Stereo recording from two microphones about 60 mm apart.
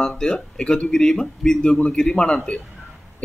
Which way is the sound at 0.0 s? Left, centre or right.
Centre.